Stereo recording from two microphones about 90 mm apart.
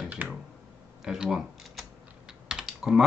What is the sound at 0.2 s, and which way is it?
Computer keyboard, 20° right (ahead or behind).